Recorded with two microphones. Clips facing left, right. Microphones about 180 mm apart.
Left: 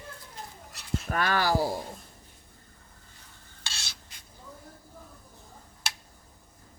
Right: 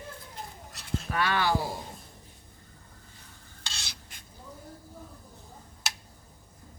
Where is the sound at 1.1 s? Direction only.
40° left (ahead or behind).